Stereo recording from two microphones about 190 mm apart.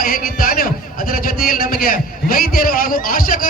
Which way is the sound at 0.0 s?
50° left (ahead or behind).